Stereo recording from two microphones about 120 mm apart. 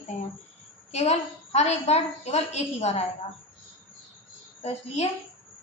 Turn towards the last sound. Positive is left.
turn(degrees=65)  # may be behind; listen again after turning